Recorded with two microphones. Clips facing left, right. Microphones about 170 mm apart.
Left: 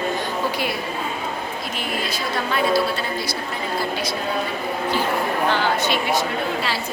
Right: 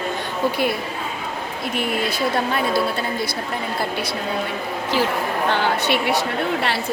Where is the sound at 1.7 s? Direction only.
60° right (ahead or behind).